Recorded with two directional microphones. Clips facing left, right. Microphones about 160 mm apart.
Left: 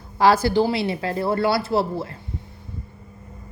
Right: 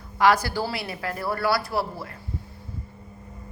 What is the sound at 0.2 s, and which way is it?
A woman's voice, 25° left (ahead or behind).